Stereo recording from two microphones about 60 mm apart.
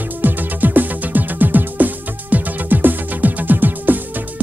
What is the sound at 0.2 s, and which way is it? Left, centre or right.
Music, right.